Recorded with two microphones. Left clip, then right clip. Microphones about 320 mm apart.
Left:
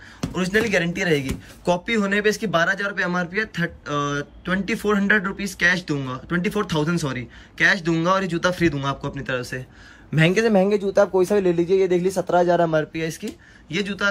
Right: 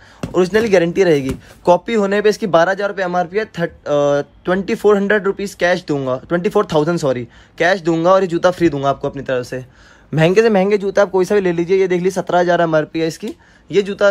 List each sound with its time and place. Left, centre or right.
0.2 s speech: centre
10.4 s speech: left
10.7 s speech: right; by 14.0 s centre